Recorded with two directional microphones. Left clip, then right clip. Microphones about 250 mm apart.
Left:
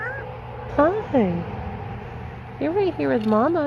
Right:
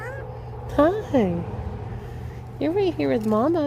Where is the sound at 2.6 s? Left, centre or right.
Right.